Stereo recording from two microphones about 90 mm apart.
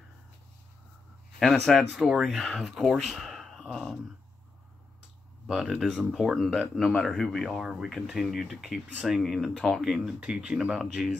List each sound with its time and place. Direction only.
1.4 s speech: centre (ahead or behind)
5.5 s speech: centre (ahead or behind)